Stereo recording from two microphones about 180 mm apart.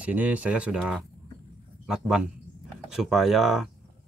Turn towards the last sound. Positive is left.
turn(degrees=0)  # may be behind; listen again after turning